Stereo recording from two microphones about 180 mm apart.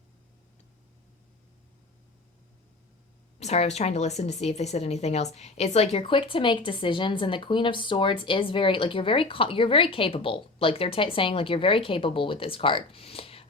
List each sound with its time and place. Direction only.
3.4 s speech: 35° left (ahead or behind)